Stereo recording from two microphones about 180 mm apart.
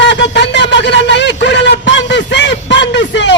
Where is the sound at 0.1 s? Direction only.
75° left (ahead or behind).